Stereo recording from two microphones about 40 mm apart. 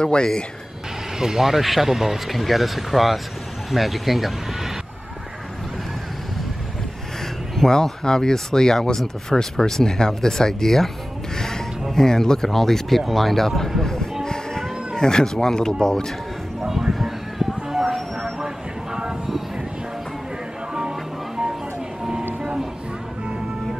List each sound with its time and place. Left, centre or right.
0.0 s speech: left
1.1 s speech: centre
7.5 s speech: centre
11.3 s a sound: centre
11.9 s speech: centre
14.2 s music: centre
15.0 s speech: centre
16.6 s a sound: centre
22.4 s music: centre